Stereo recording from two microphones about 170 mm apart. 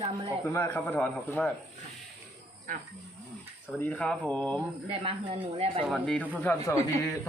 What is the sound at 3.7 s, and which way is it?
Speech, 10° left (ahead or behind).